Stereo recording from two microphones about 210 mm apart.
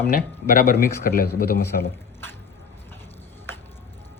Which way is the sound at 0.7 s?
45° left (ahead or behind).